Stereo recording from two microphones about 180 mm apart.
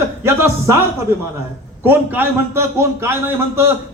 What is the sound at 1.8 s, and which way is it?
A man's voice, 10° right (ahead or behind).